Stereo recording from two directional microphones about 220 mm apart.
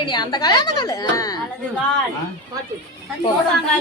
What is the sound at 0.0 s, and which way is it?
Speech, 20° left (ahead or behind).